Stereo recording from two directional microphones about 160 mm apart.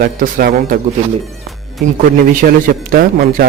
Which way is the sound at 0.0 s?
70° right (ahead or behind).